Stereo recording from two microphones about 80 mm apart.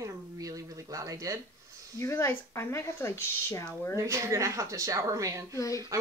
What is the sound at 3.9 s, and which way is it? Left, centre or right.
Speech, right.